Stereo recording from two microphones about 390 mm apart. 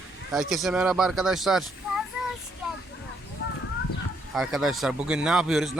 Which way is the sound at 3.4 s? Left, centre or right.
Left.